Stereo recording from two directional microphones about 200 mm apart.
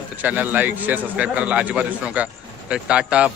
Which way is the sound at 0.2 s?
10° right (ahead or behind).